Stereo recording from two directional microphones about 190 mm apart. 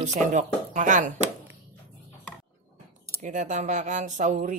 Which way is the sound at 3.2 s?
40° right (ahead or behind).